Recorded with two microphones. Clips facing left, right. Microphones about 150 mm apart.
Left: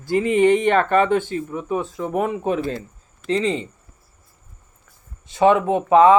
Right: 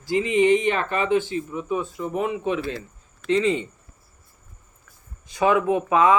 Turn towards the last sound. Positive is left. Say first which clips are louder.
# left 5 dB
turn(degrees=30)  # may be behind; listen again after turning